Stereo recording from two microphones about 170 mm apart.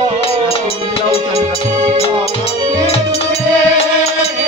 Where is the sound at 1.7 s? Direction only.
40° right (ahead or behind).